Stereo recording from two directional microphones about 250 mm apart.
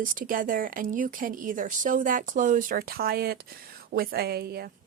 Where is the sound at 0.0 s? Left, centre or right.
Right.